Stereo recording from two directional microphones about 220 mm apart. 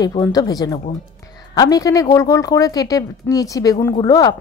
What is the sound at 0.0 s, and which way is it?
A woman's voice, 15° left (ahead or behind).